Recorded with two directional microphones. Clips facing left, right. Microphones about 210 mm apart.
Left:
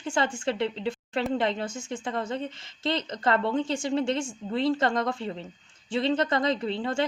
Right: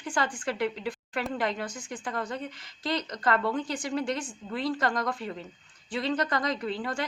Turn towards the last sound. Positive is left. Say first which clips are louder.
# left 3 dB
turn(degrees=25)  # may be behind; listen again after turning